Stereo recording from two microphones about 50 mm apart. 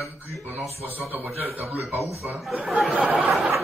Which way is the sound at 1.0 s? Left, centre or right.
Right.